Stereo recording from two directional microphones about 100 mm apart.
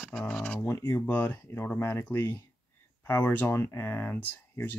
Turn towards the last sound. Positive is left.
turn(degrees=20)  # may be behind; listen again after turning